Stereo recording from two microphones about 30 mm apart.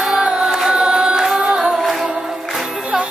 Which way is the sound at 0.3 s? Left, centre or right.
Right.